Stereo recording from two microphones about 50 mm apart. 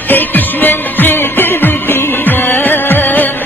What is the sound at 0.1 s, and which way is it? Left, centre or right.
Music, left.